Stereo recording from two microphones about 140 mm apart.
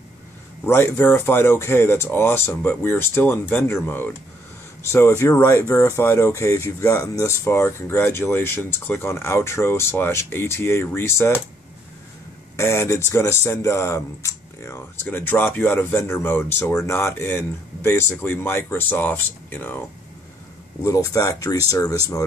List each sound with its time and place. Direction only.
0.7 s speech: 15° left (ahead or behind)
12.5 s speech: 20° left (ahead or behind)
20.8 s speech: 25° left (ahead or behind)